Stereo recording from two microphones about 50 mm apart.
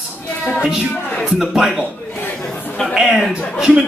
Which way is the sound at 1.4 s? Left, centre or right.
Centre.